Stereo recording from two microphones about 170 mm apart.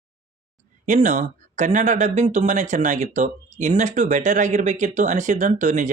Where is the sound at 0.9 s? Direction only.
45° right (ahead or behind).